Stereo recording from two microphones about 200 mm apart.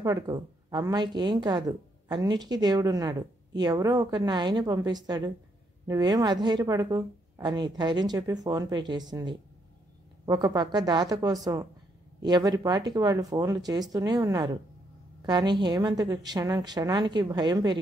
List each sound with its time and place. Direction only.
0.0 s a woman's voice: 20° right (ahead or behind)